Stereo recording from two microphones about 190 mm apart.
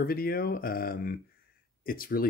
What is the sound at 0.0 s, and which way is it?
Speech, 50° left (ahead or behind).